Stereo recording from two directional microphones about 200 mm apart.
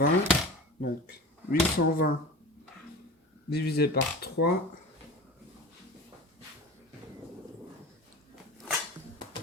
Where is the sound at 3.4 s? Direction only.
50° left (ahead or behind).